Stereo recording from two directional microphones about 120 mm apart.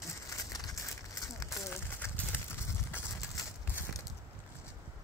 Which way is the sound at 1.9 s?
15° left (ahead or behind).